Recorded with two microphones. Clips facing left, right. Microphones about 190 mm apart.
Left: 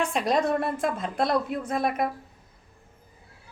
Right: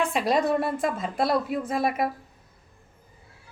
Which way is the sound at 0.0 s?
Centre (ahead or behind).